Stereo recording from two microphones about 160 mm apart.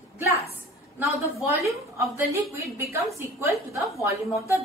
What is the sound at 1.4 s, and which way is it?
A woman's voice, 20° right (ahead or behind).